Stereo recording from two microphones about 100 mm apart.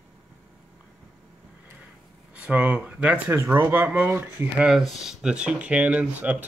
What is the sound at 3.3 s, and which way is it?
Speech, 25° right (ahead or behind).